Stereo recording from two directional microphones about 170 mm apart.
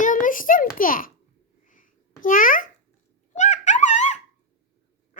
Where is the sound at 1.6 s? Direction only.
50° left (ahead or behind).